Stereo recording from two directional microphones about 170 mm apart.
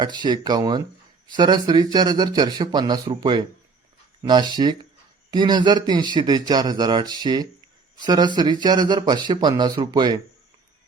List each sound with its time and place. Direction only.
0.0 s speech: 25° right (ahead or behind)